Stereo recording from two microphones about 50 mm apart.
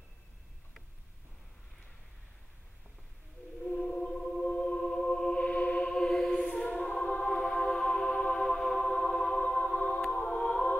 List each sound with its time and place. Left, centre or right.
3.6 s music: centre
5.4 s music: left
5.9 s choir: centre
9.4 s music: centre
10.1 s choir: centre